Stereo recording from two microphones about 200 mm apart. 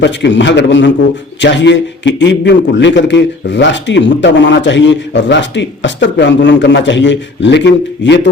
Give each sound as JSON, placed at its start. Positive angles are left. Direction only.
{"t": 0.0, "sound": "a man's voice", "side_deg": 65}